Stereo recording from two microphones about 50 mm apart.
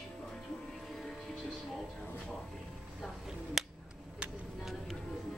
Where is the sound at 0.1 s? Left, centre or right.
Centre.